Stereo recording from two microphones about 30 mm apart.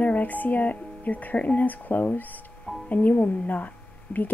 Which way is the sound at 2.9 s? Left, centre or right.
Left.